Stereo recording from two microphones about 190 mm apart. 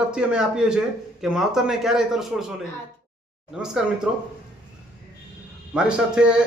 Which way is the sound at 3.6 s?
5° right (ahead or behind).